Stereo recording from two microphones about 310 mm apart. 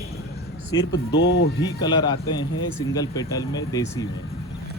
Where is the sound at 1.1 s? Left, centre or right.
Left.